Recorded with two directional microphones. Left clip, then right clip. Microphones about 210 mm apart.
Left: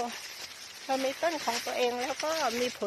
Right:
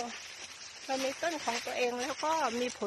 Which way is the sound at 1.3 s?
10° left (ahead or behind).